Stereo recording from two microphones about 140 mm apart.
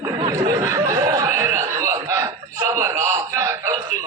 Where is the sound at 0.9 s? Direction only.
20° right (ahead or behind).